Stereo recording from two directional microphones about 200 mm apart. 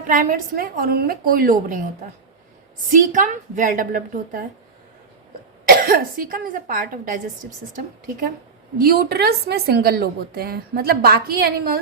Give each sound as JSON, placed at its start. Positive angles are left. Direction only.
{"t": 0.1, "sound": "a woman's voice", "side_deg": -40}
{"t": 2.9, "sound": "a woman's voice", "side_deg": -40}
{"t": 5.6, "sound": "a woman's voice", "side_deg": -45}
{"t": 8.8, "sound": "a woman's voice", "side_deg": -50}